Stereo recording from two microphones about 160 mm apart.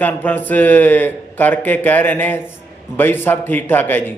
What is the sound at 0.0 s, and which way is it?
A man's voice, 10° left (ahead or behind).